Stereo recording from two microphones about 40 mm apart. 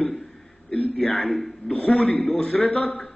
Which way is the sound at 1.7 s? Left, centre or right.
Left.